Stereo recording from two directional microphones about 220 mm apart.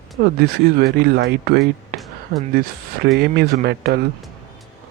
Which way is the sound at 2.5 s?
45° right (ahead or behind).